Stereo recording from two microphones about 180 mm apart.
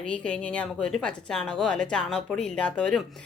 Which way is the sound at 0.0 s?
5° left (ahead or behind).